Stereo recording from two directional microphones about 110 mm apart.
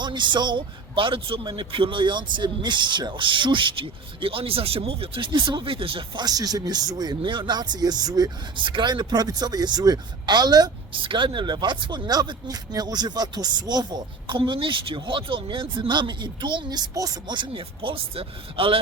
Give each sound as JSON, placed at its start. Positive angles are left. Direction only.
{"t": 0.0, "sound": "speech", "side_deg": -45}
{"t": 6.2, "sound": "speech", "side_deg": -35}
{"t": 7.2, "sound": "speech", "side_deg": -45}
{"t": 10.9, "sound": "speech", "side_deg": -50}